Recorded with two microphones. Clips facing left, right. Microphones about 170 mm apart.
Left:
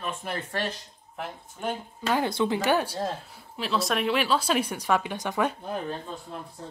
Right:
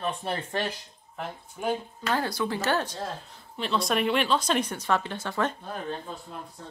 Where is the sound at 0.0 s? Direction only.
30° right (ahead or behind).